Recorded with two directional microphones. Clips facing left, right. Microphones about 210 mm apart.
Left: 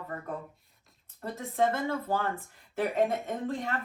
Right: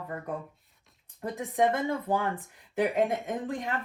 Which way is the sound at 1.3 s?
15° right (ahead or behind).